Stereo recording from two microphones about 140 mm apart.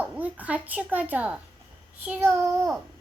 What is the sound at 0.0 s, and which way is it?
A woman's voice, 10° right (ahead or behind).